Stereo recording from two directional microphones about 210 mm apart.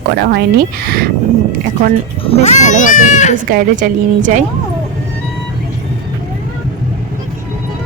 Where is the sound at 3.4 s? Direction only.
40° right (ahead or behind).